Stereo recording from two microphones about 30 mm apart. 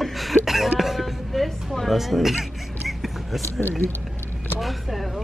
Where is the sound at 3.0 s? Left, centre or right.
Centre.